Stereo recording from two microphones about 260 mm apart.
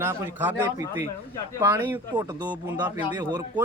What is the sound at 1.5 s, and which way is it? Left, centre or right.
A man's voice, centre.